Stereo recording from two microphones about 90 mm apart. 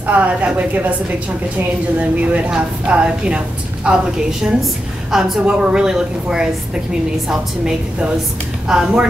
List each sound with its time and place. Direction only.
0.0 s a woman's voice: 15° right (ahead or behind)
2.0 s a woman's voice: 15° right (ahead or behind)